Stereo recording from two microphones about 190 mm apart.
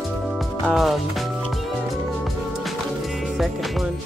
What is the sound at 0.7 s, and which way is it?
Speech, centre (ahead or behind).